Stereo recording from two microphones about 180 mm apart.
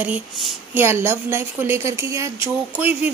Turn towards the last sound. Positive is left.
turn(degrees=-10)  # may be behind; listen again after turning